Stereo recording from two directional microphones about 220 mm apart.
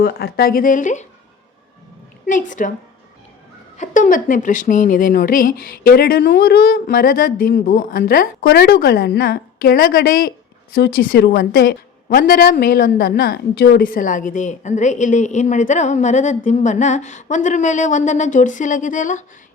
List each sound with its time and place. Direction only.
0.0 s a woman's voice: 45° left (ahead or behind)
2.2 s a woman's voice: 35° left (ahead or behind)
3.8 s a woman's voice: 35° left (ahead or behind)